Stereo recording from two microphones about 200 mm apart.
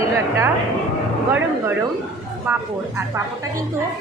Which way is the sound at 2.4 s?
10° right (ahead or behind).